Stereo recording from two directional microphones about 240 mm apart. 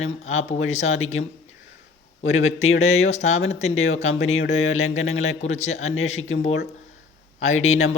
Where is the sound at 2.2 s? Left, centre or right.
Left.